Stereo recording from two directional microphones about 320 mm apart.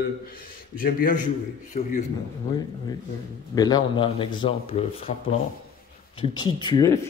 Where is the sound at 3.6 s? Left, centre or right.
Centre.